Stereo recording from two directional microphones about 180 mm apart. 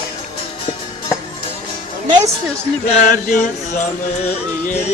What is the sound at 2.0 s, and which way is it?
Music, 25° right (ahead or behind).